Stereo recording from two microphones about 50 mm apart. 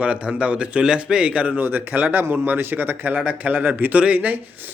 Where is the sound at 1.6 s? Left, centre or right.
Right.